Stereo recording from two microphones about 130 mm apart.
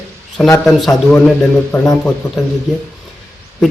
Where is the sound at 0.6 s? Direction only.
Centre (ahead or behind).